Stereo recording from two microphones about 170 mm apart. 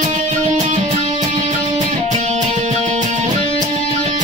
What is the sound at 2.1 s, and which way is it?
Music, 45° right (ahead or behind).